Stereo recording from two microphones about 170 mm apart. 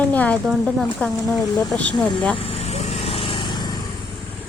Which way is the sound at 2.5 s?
40° left (ahead or behind).